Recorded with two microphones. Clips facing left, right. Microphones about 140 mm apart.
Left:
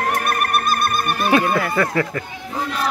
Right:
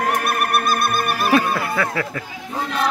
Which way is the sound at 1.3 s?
Centre (ahead or behind).